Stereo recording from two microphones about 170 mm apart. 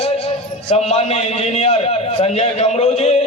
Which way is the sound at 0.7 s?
40° left (ahead or behind).